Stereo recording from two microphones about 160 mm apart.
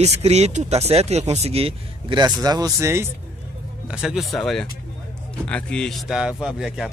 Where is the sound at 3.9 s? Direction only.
5° right (ahead or behind).